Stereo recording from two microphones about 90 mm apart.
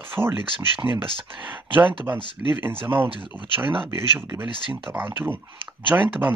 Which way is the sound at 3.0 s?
70° right (ahead or behind).